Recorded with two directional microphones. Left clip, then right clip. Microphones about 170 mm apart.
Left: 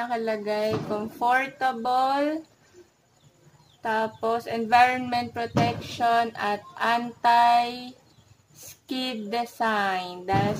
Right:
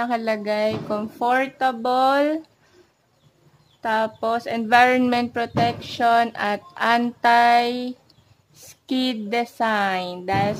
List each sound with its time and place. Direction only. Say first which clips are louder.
0.0 s speech: right 4 dB; 60° right (ahead or behind)
3.8 s music: right 4 dB; 55° right (ahead or behind)